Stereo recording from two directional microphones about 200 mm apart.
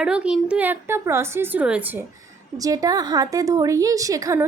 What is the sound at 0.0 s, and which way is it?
A woman's voice, 5° right (ahead or behind).